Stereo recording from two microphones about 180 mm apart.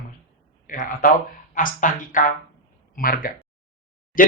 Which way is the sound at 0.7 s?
50° left (ahead or behind).